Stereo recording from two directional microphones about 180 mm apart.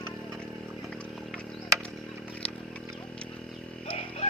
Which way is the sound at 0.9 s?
5° left (ahead or behind).